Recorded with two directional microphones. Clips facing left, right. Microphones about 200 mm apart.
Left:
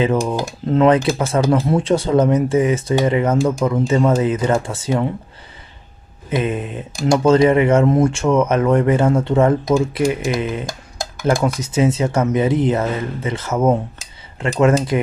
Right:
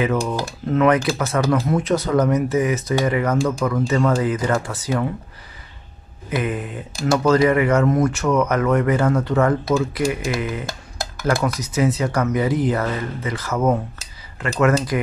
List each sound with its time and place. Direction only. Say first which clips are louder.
0.3 s speech: left 3 dB; 20° left (ahead or behind)
0.7 s speech: left 3 dB; 30° left (ahead or behind)
6.3 s speech: left 3 dB; 25° left (ahead or behind)
11.4 s speech: left 3 dB; 25° left (ahead or behind)